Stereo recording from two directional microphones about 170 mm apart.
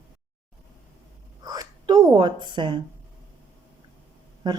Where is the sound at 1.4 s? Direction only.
20° right (ahead or behind).